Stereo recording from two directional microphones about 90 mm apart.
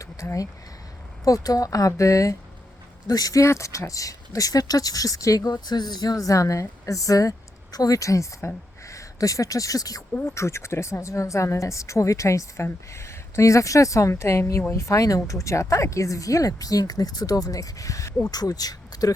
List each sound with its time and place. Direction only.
0.0 s a sound: 35° left (ahead or behind)
1.2 s a woman's voice: 40° left (ahead or behind)
5.5 s a woman's voice: 50° left (ahead or behind)
10.2 s a woman's voice: 30° left (ahead or behind); by 19.1 s 45° left (ahead or behind)